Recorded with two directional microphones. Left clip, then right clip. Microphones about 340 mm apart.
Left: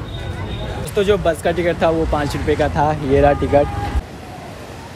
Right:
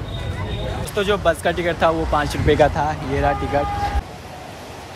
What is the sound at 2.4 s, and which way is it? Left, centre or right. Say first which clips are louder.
Speech: right 4 dB; right.